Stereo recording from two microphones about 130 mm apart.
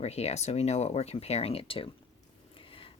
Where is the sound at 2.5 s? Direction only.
45° left (ahead or behind).